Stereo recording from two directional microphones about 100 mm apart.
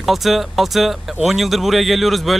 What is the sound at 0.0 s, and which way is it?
Speech, centre (ahead or behind).